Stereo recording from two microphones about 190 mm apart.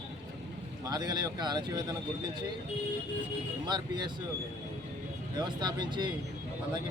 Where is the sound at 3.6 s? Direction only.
20° right (ahead or behind).